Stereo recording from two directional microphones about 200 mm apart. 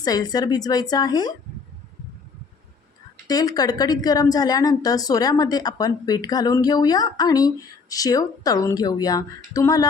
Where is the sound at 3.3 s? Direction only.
20° left (ahead or behind).